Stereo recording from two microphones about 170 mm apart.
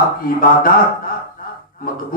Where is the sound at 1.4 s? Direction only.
55° left (ahead or behind).